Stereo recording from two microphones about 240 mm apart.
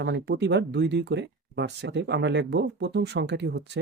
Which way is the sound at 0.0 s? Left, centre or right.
Right.